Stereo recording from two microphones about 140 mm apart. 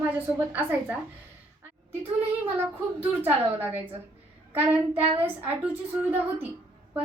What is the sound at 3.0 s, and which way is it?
A woman's voice, 15° right (ahead or behind).